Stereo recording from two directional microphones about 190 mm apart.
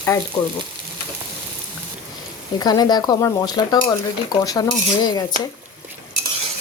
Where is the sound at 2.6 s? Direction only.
20° left (ahead or behind).